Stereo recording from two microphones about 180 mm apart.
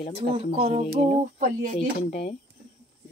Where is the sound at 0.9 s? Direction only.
45° right (ahead or behind).